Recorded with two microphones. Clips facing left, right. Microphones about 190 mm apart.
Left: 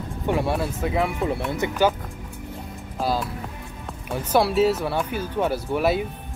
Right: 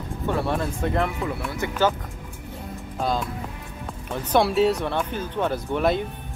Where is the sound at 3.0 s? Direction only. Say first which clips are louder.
Left 1 dB; 5° left (ahead or behind).